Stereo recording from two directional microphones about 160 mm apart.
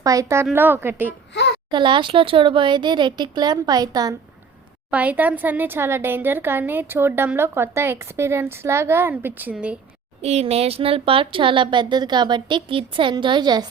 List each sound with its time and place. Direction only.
0.0 s speech: 20° right (ahead or behind)
1.7 s speech: 30° right (ahead or behind)
4.9 s speech: 10° right (ahead or behind)
10.2 s speech: 40° right (ahead or behind); by 13.7 s 25° right (ahead or behind)